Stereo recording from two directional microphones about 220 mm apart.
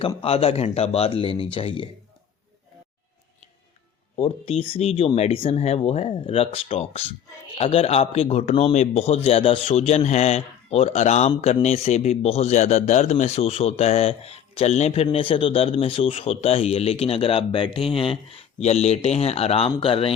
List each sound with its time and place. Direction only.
0.0 s a man's voice: 25° left (ahead or behind)
4.2 s a man's voice: 25° left (ahead or behind)